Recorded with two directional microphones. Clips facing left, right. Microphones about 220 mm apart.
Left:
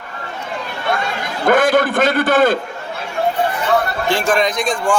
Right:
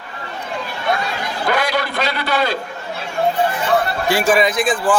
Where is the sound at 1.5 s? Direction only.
50° left (ahead or behind).